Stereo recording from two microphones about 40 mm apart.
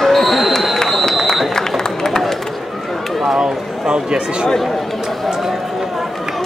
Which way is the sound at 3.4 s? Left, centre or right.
Right.